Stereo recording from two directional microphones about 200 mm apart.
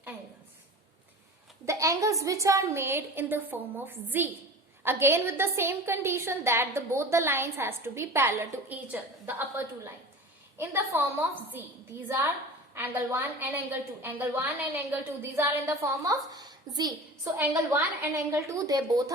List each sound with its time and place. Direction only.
1.6 s a woman's voice: 15° right (ahead or behind)